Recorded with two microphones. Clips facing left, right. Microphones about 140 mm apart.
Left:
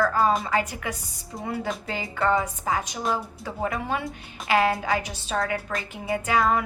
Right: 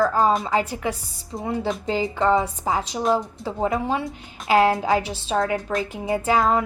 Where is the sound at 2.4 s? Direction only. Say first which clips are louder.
Right 3 dB; 30° right (ahead or behind).